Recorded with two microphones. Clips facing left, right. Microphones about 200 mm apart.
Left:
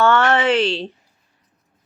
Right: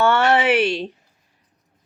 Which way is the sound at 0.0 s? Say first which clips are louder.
Left 1 dB; 15° right (ahead or behind).